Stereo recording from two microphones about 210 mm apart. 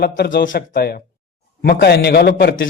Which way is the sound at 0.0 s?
50° left (ahead or behind).